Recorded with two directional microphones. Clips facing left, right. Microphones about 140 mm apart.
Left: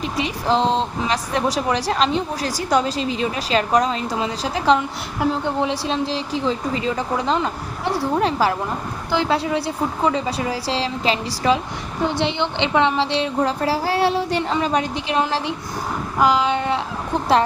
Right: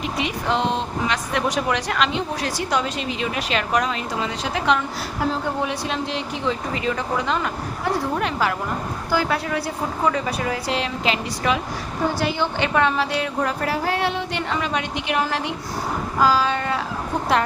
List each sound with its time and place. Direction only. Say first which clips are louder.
0.0 s a woman's voice: left 1 dB; 35° left (ahead or behind)